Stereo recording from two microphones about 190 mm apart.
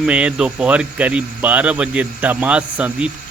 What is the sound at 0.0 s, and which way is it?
Speech, 5° right (ahead or behind).